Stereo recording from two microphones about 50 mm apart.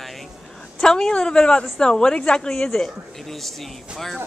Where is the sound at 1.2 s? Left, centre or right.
Centre.